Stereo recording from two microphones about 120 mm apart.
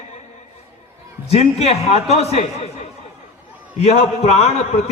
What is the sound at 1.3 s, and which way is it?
A man's voice, 60° left (ahead or behind).